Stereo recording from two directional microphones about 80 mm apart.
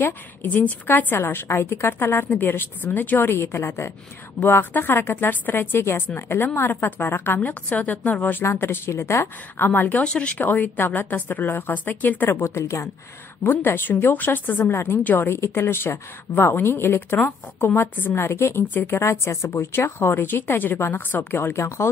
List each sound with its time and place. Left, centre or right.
0.0 s a woman's voice: left
9.7 s a woman's voice: left
12.3 s a woman's voice: left
13.4 s a woman's voice: left